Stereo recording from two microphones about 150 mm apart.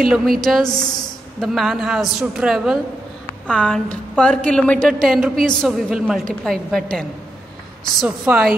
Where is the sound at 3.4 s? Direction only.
5° left (ahead or behind).